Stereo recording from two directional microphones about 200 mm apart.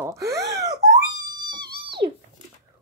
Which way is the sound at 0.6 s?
20° right (ahead or behind).